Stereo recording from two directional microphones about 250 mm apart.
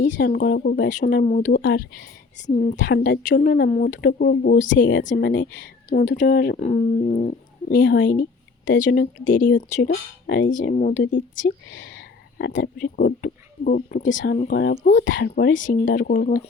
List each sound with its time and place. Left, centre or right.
0.1 s speech: left
5.9 s speech: left
11.6 s speech: left
15.9 s speech: left